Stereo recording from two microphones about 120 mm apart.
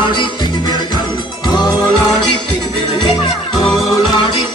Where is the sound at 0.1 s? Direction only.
40° left (ahead or behind).